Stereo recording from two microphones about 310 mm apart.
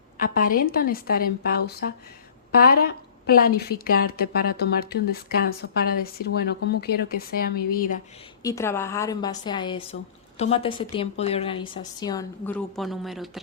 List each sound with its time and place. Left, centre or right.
0.2 s a woman's voice: left
8.4 s a woman's voice: centre